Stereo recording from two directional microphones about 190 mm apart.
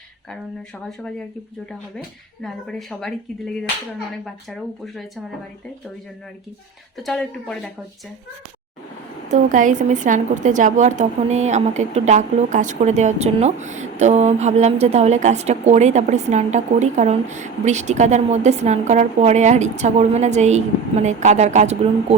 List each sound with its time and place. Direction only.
2.4 s a woman's voice: centre (ahead or behind)
7.0 s a woman's voice: 5° left (ahead or behind)
9.3 s a woman's voice: 45° right (ahead or behind)